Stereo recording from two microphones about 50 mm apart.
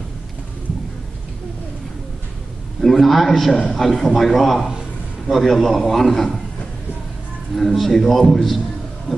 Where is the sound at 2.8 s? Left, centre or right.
Centre.